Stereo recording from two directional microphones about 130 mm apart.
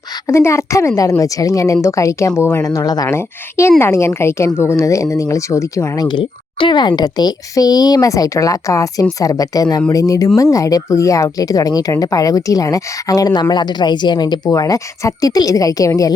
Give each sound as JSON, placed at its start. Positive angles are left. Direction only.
{"t": 0.3, "sound": "speech", "side_deg": 20}
{"t": 3.2, "sound": "speech", "side_deg": 20}